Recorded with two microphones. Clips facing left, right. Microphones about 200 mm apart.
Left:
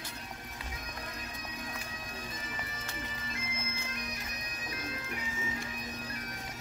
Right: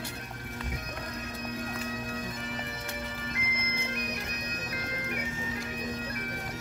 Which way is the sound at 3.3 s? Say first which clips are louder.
Right 4 dB; 65° right (ahead or behind).